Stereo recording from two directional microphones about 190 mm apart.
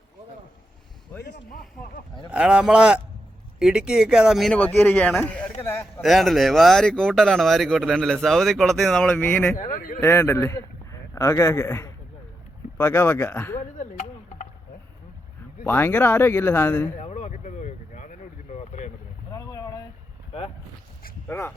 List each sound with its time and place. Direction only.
1.3 s speech: 50° left (ahead or behind)
2.3 s speech: 5° right (ahead or behind); by 5.9 s 15° left (ahead or behind)
6.0 s speech: centre (ahead or behind)
9.6 s speech: 40° left (ahead or behind)
10.0 s speech: 15° left (ahead or behind)
13.7 s chop: 35° left (ahead or behind)
15.6 s speech: 10° left (ahead or behind)
17.0 s a sound: 35° left (ahead or behind)
19.3 s boat: 20° left (ahead or behind)
21.2 s speech: 10° left (ahead or behind)